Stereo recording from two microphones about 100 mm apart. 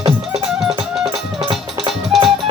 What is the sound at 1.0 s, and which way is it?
Music, 60° right (ahead or behind).